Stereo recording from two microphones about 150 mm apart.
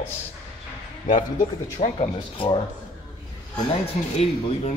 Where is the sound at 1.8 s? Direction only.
40° left (ahead or behind).